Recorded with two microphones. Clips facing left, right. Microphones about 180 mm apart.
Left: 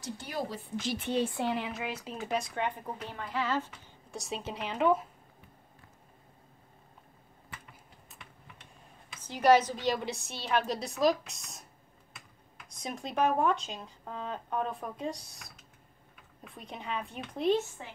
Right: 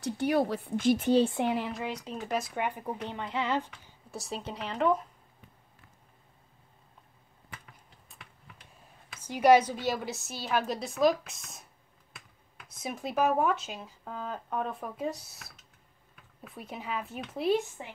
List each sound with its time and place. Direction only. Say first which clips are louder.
0.0 s speech: right 9 dB; 65° right (ahead or behind); by 1.2 s 40° right (ahead or behind)
1.2 s speech: right 4 dB; 20° right (ahead or behind)
1.5 s speech: right 2 dB; centre (ahead or behind)
3.1 s speech: right 1 dB; 20° right (ahead or behind)
4.1 s speech: even; centre (ahead or behind)
8.1 s typing: even; centre (ahead or behind)
9.1 s speech: right 2 dB; 10° right (ahead or behind)
12.6 s speech: right 2 dB; 5° right (ahead or behind)